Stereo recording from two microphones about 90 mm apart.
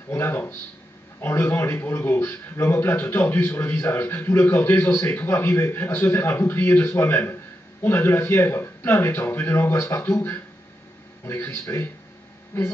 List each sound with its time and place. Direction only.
0.1 s a man's voice: 25° left (ahead or behind)